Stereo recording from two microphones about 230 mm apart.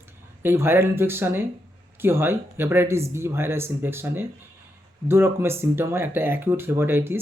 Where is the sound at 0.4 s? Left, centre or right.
Centre.